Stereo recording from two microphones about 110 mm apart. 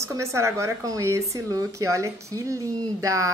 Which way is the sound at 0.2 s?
25° right (ahead or behind).